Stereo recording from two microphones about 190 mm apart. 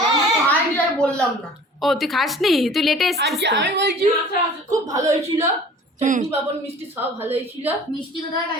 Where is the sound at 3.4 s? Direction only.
65° right (ahead or behind).